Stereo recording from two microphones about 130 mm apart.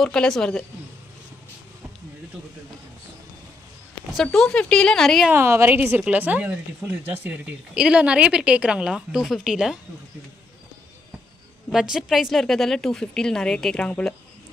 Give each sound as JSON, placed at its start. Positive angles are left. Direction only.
{"t": 0.0, "sound": "a woman's voice", "side_deg": 5}
{"t": 4.1, "sound": "a woman's voice", "side_deg": 0}
{"t": 5.3, "sound": "speech", "side_deg": -20}
{"t": 11.7, "sound": "a woman's voice", "side_deg": -5}